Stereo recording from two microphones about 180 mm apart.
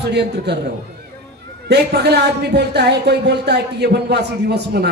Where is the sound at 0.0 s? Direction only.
65° right (ahead or behind).